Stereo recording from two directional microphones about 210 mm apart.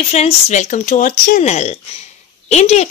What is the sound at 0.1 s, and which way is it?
A woman's voice, 30° left (ahead or behind).